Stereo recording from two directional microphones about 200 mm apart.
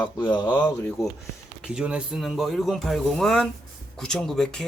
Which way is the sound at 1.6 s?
5° right (ahead or behind).